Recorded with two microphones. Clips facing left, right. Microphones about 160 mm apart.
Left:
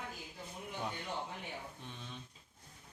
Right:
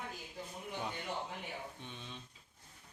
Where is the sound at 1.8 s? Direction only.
Centre (ahead or behind).